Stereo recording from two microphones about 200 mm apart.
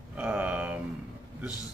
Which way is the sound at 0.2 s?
10° right (ahead or behind).